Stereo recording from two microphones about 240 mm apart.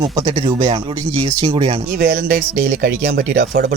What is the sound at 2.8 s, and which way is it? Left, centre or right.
Speech, right.